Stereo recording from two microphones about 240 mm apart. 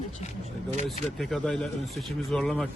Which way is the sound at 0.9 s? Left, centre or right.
Centre.